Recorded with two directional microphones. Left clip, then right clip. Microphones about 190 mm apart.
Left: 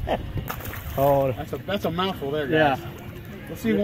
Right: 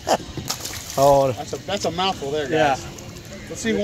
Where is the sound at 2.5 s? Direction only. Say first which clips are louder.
Right 1 dB; 30° left (ahead or behind).